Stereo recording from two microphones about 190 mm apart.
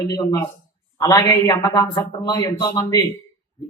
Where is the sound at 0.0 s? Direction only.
20° left (ahead or behind).